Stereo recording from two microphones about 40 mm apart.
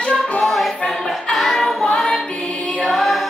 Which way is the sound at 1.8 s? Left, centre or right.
Centre.